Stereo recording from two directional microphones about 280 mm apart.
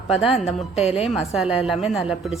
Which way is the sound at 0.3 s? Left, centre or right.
Left.